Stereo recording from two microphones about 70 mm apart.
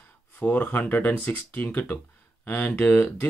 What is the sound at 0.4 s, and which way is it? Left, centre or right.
Speech, left.